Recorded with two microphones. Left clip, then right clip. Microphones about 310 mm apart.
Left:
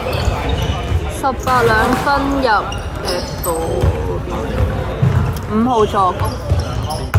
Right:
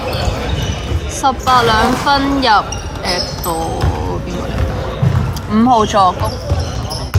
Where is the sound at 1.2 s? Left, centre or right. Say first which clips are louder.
Right 3 dB; right.